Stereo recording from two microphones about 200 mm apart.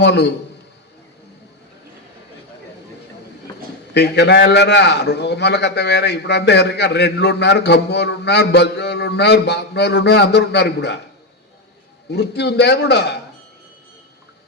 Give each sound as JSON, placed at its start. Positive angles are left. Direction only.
{"t": 0.0, "sound": "a man's voice", "side_deg": 60}
{"t": 3.9, "sound": "a man's voice", "side_deg": 55}
{"t": 12.1, "sound": "a man's voice", "side_deg": 55}